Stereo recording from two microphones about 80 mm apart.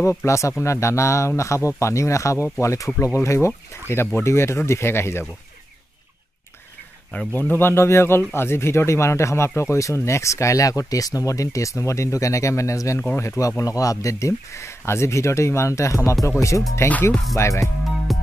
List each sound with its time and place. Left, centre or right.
0.2 s speech: left
7.1 s speech: left
16.9 s speech: centre
17.4 s speech: left